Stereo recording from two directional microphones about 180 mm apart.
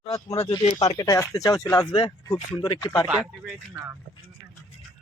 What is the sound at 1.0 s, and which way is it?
Speech, 20° left (ahead or behind).